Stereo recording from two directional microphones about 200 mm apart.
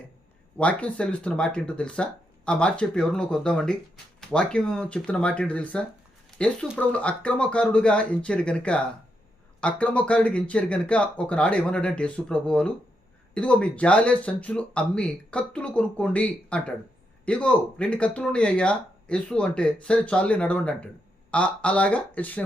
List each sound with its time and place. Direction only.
0.6 s speech: 5° left (ahead or behind)